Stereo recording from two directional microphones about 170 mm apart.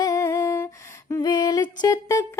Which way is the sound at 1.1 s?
25° left (ahead or behind).